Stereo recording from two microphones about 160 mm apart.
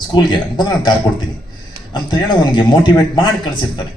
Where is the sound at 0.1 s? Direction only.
30° left (ahead or behind).